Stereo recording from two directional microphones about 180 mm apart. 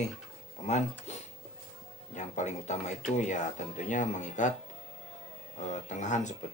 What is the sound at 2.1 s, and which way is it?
Speech, 40° left (ahead or behind).